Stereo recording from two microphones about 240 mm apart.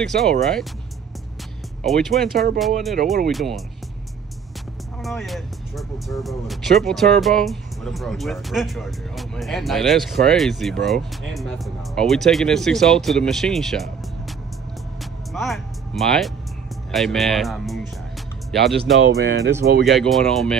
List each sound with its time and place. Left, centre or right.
0.0 s speech: centre
1.8 s speech: centre
5.0 s speech: centre
15.3 s music: centre
16.9 s speech: centre
18.9 s speech: right
19.9 s speech: centre